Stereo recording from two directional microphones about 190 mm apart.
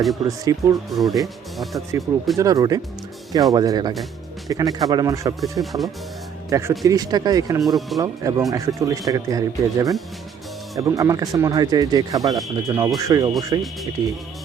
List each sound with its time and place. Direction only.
0.3 s speech: 20° right (ahead or behind)
0.9 s speech: centre (ahead or behind)
2.4 s speech: 20° right (ahead or behind)
5.4 s speech: centre (ahead or behind)
6.5 s speech: 15° right (ahead or behind)